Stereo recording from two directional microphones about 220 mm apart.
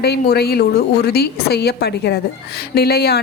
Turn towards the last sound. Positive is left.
turn(degrees=45)  # may be behind; listen again after turning